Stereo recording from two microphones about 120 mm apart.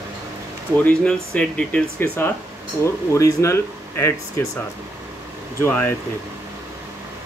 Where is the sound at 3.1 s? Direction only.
25° left (ahead or behind).